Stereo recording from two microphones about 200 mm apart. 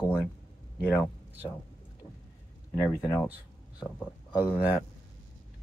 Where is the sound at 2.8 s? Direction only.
20° left (ahead or behind).